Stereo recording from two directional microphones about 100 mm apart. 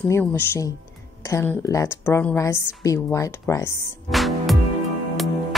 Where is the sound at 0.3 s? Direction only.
30° left (ahead or behind).